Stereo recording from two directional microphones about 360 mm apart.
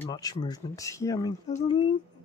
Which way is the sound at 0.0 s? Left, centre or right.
Centre.